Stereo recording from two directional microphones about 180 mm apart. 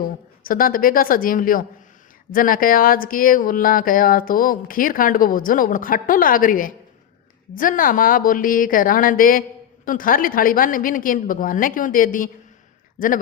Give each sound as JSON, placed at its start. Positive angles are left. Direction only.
{"t": 0.0, "sound": "speech", "side_deg": 50}